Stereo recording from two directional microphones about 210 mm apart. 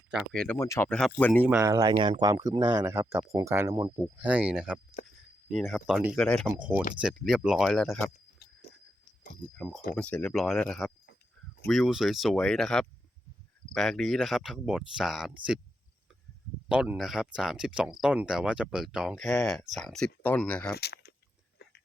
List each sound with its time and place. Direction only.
0.1 s speech: centre (ahead or behind)
1.5 s speech: 10° right (ahead or behind)
9.6 s speech: centre (ahead or behind)
16.6 s speech: 5° right (ahead or behind)
20.7 s a sound: 50° left (ahead or behind)